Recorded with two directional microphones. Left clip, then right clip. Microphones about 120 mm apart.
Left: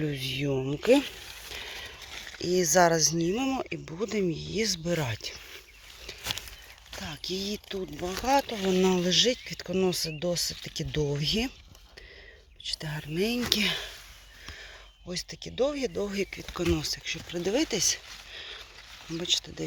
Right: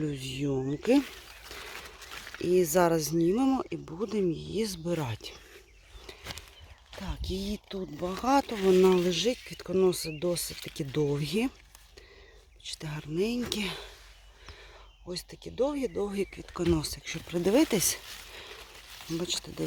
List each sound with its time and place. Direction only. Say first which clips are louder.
0.1 s speech: left 2 dB; 15° right (ahead or behind)
2.4 s speech: left 2 dB; 25° right (ahead or behind)
3.6 s speech: left 1 dB; 20° right (ahead or behind)
7.0 s speech: left 3 dB; 30° right (ahead or behind)
8.2 s speech: left 1 dB; 50° right (ahead or behind)
8.9 s speech: left 2 dB; 25° right (ahead or behind)
12.6 s speech: left 5 dB; 30° right (ahead or behind); by 13.8 s 10° right (ahead or behind)
15.1 s speech: left 2 dB; 20° right (ahead or behind)
16.7 s speech: left 2 dB; 50° right (ahead or behind); by 18.4 s 80° right
19.1 s speech: left 5 dB; 50° right (ahead or behind)